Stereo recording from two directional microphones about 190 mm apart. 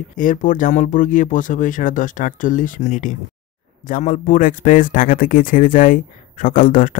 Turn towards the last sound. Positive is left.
turn(degrees=45)  # may be behind; listen again after turning